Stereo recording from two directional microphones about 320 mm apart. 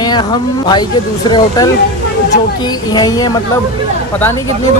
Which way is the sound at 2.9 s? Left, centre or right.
Centre.